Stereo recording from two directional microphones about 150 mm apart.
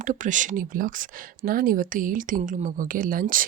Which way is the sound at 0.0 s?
55° right (ahead or behind).